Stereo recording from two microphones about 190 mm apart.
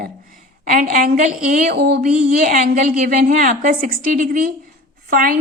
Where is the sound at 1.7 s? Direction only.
60° right (ahead or behind).